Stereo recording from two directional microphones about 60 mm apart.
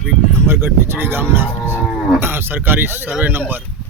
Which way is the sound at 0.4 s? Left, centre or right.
Right.